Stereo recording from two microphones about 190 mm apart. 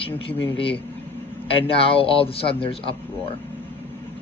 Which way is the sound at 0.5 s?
30° left (ahead or behind).